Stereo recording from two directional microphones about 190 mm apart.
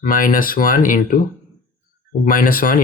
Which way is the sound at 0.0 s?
45° left (ahead or behind).